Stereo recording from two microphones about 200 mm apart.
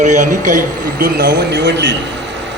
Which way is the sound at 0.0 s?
40° right (ahead or behind).